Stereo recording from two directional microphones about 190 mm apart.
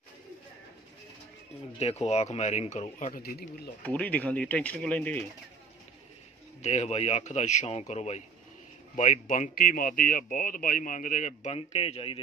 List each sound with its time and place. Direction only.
1.8 s speech: 35° left (ahead or behind); by 3.4 s 55° left (ahead or behind)
3.8 s speech: 5° left (ahead or behind)
6.6 s speech: 35° left (ahead or behind)